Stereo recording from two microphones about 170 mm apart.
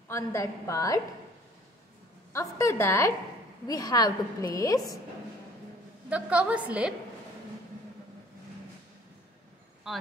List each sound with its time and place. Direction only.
0.1 s a woman's voice: 15° left (ahead or behind)
2.3 s a woman's voice: 15° left (ahead or behind)
6.0 s a woman's voice: 5° right (ahead or behind)
9.9 s speech: centre (ahead or behind)